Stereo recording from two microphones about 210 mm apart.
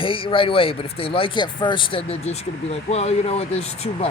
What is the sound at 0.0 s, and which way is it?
Speech, 25° left (ahead or behind).